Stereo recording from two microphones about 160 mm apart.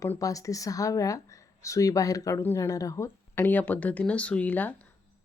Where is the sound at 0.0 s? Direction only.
20° left (ahead or behind).